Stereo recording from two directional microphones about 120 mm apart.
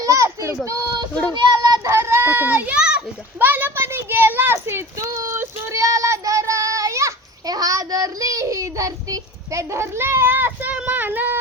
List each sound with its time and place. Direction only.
0.0 s a child's voice: 25° right (ahead or behind)
1.5 s child singing: 35° right (ahead or behind); by 11.3 s 15° right (ahead or behind)